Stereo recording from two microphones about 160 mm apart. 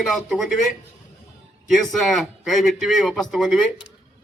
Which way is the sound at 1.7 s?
Centre (ahead or behind).